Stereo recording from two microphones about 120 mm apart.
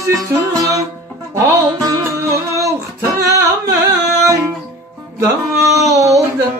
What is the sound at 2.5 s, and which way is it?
Music, 25° right (ahead or behind).